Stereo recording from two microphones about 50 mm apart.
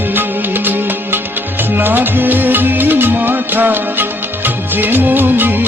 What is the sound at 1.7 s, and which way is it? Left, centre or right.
Music, right.